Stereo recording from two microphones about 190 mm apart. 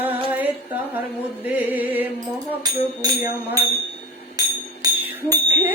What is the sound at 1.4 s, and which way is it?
Music, 10° right (ahead or behind).